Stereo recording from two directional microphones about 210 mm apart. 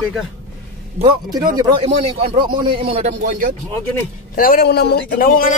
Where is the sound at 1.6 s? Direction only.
20° right (ahead or behind).